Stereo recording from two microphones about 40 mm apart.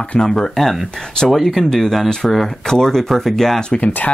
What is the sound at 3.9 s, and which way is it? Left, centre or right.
Speech, left.